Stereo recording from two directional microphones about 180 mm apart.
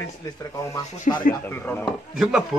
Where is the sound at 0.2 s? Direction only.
20° left (ahead or behind).